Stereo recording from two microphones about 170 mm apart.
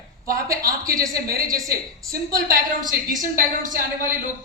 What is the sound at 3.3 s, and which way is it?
Speech, 55° right (ahead or behind).